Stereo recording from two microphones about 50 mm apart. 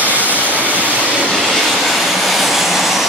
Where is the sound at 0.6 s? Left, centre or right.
Right.